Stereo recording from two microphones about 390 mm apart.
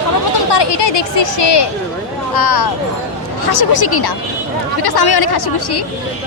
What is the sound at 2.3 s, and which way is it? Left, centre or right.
Speech, left.